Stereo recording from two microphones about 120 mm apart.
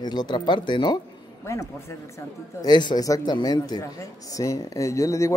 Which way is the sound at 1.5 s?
25° left (ahead or behind).